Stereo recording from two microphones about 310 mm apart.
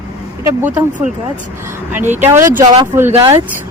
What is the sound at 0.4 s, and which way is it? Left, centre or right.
Speech, centre.